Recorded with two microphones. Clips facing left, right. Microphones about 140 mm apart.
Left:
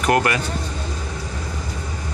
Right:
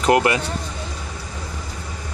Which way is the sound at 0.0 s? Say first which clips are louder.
Right 2 dB; 20° right (ahead or behind).